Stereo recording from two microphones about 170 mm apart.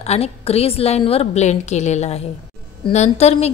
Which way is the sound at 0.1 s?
35° left (ahead or behind).